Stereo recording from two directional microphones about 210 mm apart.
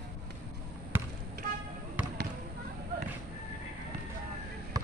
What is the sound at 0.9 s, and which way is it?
Basketball bounce, 10° right (ahead or behind).